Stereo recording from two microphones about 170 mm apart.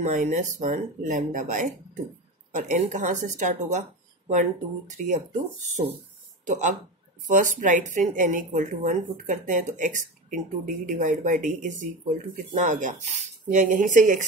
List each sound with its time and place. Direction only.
0.0 s a woman's voice: 45° right (ahead or behind)
6.4 s a woman's voice: 45° right (ahead or behind)